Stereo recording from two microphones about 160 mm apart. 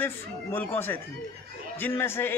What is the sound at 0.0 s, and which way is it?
Speech, 15° left (ahead or behind).